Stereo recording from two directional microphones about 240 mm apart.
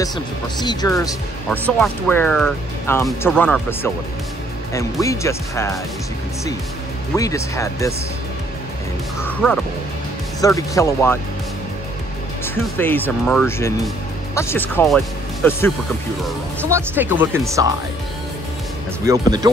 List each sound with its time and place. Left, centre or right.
0.0 s speech: centre
5.0 s speech: centre
7.2 s speech: centre
9.2 s speech: centre
12.7 s speech: centre
16.6 s speech: centre
19.0 s speech: centre